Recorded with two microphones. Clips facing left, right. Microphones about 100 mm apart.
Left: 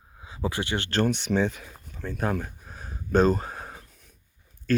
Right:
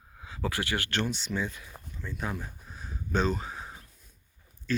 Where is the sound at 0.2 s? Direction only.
20° left (ahead or behind).